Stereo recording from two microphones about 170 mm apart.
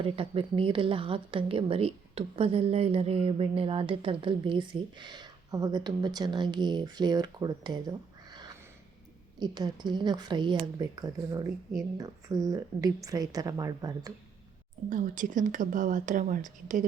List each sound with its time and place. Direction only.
0.0 s a woman's voice: 30° right (ahead or behind)
14.8 s speech: 50° right (ahead or behind)